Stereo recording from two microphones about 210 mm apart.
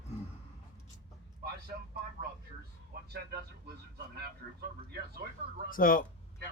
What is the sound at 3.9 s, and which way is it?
Speech, 50° right (ahead or behind).